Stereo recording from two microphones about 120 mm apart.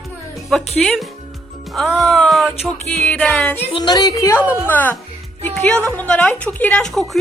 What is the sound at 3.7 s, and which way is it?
Speech, 35° left (ahead or behind).